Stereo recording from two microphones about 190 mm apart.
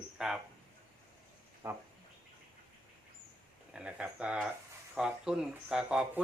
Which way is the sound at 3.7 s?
5° right (ahead or behind).